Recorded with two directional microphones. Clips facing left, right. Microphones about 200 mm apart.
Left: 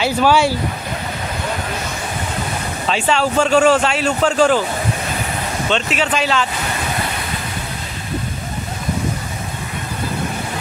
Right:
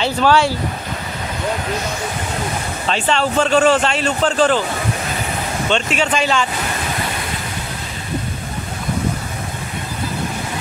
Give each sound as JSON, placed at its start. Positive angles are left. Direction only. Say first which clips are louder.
{"t": 0.0, "sound": "speech", "louder": "even", "side_deg": 10}
{"t": 2.9, "sound": "speech", "louder": "left 1 dB", "side_deg": 5}
{"t": 5.7, "sound": "speech", "louder": "right 1 dB", "side_deg": 0}